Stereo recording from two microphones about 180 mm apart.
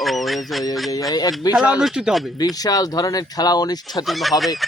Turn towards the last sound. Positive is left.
turn(degrees=0)  # may be behind; listen again after turning